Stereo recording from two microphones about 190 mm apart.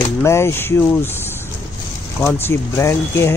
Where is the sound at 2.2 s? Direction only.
15° left (ahead or behind).